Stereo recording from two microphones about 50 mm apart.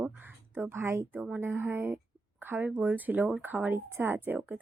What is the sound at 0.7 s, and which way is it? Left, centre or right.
A woman's voice, right.